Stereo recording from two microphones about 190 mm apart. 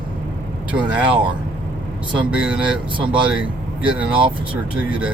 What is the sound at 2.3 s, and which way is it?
Speech, 5° right (ahead or behind).